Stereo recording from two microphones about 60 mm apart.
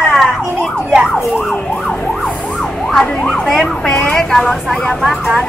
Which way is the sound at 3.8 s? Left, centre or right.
Centre.